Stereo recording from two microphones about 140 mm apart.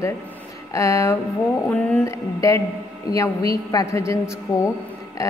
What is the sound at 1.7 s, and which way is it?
Speech, 10° left (ahead or behind).